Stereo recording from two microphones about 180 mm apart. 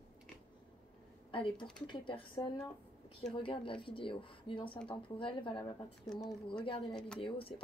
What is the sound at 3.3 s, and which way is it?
Speech, 30° left (ahead or behind).